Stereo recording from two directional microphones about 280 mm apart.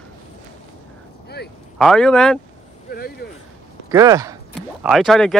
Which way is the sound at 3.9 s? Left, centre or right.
Centre.